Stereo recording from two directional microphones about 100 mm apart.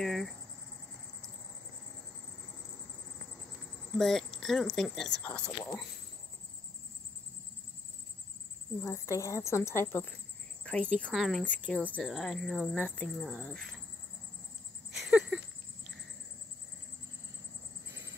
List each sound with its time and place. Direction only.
0.0 s cricket: 5° left (ahead or behind)
4.0 s speech: 5° left (ahead or behind)
8.8 s a woman's voice: 30° left (ahead or behind)
10.6 s speech: 10° left (ahead or behind)
11.1 s speech: centre (ahead or behind)
11.4 s speech: 10° left (ahead or behind)
12.8 s speech: 15° left (ahead or behind)
13.1 s speech: 5° right (ahead or behind)
14.9 s a sound: 5° right (ahead or behind)